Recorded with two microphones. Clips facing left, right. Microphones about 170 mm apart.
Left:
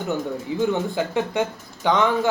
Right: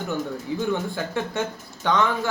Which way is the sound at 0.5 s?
20° left (ahead or behind).